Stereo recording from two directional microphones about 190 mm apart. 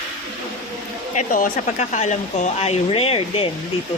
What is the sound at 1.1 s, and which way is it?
Speech, 40° left (ahead or behind).